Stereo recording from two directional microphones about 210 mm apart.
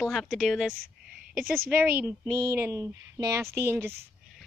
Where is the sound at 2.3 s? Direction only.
10° right (ahead or behind).